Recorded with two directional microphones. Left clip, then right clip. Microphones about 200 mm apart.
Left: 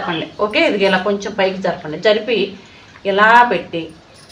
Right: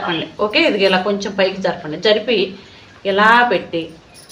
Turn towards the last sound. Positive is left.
turn(degrees=-25)  # may be behind; listen again after turning